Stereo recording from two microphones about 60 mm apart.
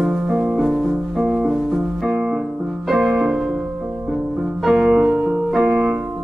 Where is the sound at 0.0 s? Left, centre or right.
Centre.